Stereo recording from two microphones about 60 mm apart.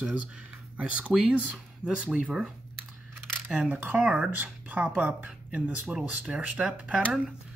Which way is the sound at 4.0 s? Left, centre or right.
Centre.